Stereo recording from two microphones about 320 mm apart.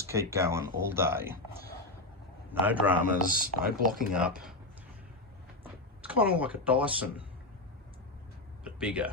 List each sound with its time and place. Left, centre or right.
0.0 s speech: centre
2.5 s speech: centre
3.2 s speech: right
4.1 s speech: centre
6.0 s speech: centre
8.6 s a sound: centre